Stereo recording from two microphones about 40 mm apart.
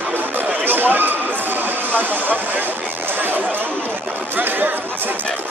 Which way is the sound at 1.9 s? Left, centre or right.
Right.